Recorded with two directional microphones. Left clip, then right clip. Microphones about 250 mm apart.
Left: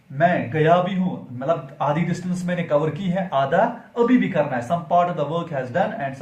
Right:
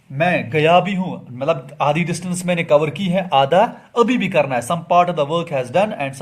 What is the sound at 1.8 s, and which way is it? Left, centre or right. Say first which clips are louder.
Speech: right 5 dB; right.